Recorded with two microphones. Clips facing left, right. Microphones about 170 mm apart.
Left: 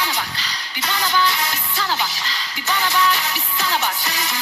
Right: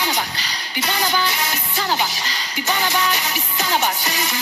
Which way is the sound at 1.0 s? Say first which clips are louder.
Left 2 dB; 50° right (ahead or behind).